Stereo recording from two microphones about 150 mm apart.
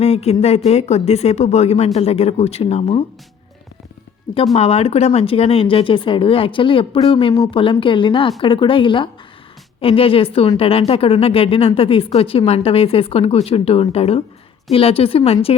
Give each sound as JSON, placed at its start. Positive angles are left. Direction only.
{"t": 0.0, "sound": "speech", "side_deg": 45}
{"t": 4.5, "sound": "speech", "side_deg": 40}